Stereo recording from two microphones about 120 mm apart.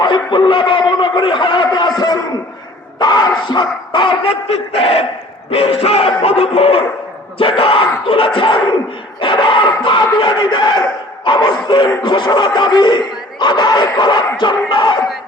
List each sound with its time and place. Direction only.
0.0 s a man's voice: 40° left (ahead or behind)